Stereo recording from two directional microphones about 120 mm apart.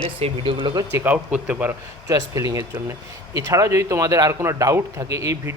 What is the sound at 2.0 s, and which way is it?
Speech, 30° right (ahead or behind).